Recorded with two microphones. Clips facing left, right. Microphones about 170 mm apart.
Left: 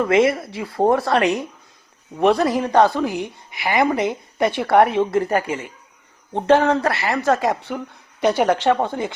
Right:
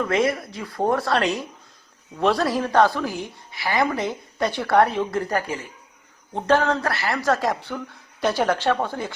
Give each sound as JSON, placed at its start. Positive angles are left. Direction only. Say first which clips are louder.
{"t": 0.0, "sound": "speech", "louder": "left 5 dB", "side_deg": 25}